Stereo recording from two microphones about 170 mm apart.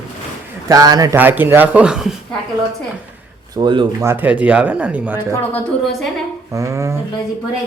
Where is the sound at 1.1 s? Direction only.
10° right (ahead or behind).